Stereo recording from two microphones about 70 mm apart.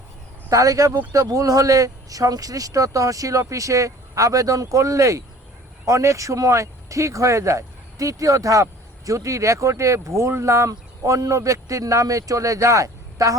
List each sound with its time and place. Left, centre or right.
0.5 s speech: right